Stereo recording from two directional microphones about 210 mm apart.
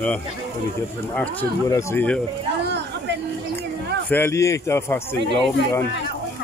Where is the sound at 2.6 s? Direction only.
55° right (ahead or behind).